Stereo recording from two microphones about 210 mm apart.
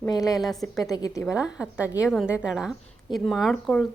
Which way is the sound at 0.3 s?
Centre (ahead or behind).